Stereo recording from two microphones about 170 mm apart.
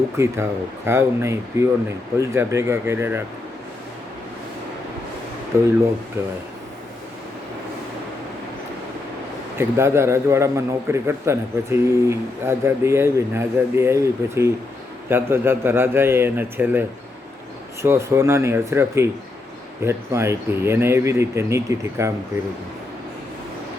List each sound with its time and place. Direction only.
0.2 s a man's voice: 15° right (ahead or behind)
5.5 s a man's voice: 15° right (ahead or behind)
9.6 s a man's voice: 15° right (ahead or behind)
17.8 s a man's voice: 15° right (ahead or behind)